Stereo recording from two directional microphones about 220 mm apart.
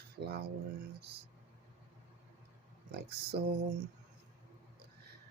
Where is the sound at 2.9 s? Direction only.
45° right (ahead or behind).